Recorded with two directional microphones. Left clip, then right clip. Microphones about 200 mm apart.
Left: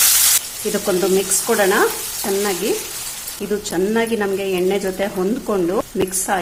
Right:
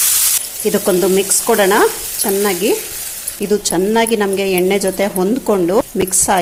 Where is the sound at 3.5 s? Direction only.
30° right (ahead or behind).